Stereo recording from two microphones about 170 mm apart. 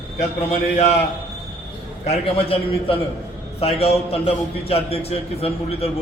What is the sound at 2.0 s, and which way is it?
A man's voice, 35° left (ahead or behind).